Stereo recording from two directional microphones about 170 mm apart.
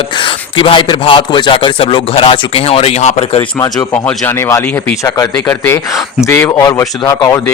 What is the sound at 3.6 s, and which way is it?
Speech, 15° left (ahead or behind).